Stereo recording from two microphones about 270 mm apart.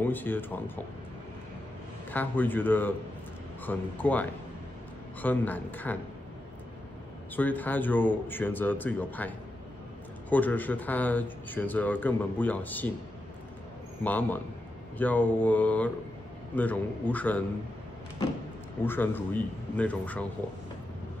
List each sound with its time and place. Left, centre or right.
0.0 s speech: centre
2.0 s speech: centre
7.3 s speech: centre
10.3 s speech: centre
14.0 s a man's voice: centre
18.9 s speech: centre